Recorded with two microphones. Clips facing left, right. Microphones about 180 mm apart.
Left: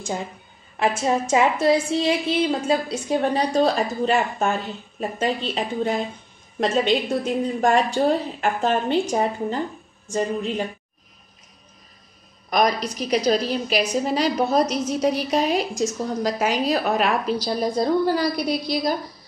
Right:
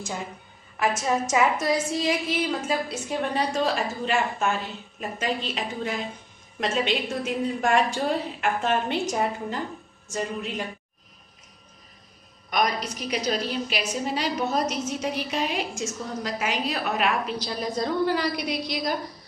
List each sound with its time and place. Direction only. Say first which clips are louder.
0.7 s a woman's voice: left 3 dB; 30° left (ahead or behind)
12.4 s a woman's voice: left 5 dB; 35° left (ahead or behind)